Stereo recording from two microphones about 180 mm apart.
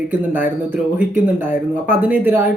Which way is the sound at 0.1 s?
10° right (ahead or behind).